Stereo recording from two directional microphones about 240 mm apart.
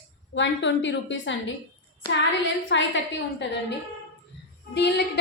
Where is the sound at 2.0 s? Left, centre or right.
Centre.